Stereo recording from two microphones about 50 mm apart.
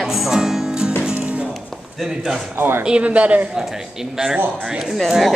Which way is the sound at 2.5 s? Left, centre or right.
Right.